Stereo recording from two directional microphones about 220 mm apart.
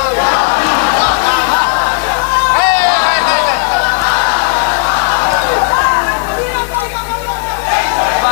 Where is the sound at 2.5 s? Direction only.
10° left (ahead or behind).